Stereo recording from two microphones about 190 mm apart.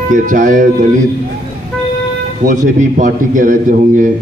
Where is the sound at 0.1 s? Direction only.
40° right (ahead or behind).